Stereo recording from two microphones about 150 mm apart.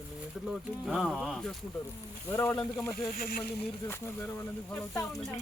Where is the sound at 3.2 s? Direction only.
80° left.